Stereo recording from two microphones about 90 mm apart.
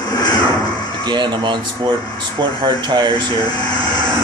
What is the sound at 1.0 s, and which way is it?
Speech, 55° right (ahead or behind).